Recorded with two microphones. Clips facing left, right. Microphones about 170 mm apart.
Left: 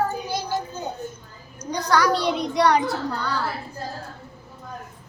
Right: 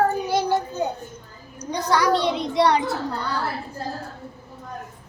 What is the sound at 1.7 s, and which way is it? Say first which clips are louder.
A child's voice: right 1 dB; 25° right (ahead or behind).